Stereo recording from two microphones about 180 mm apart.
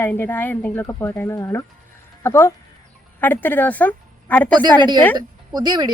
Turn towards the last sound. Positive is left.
turn(degrees=-25)  # may be behind; listen again after turning